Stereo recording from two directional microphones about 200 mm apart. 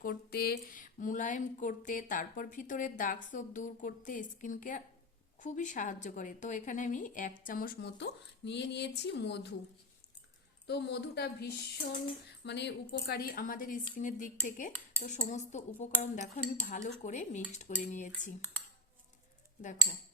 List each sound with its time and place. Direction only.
0.0 s a woman's voice: 50° left (ahead or behind)
10.7 s a woman's voice: 55° left (ahead or behind); by 18.3 s 40° left (ahead or behind)